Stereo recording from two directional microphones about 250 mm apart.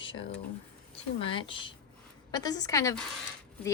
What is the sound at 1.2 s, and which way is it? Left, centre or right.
A woman's voice, centre.